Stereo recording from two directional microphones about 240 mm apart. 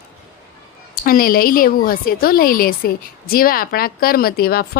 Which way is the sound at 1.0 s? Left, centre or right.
Left.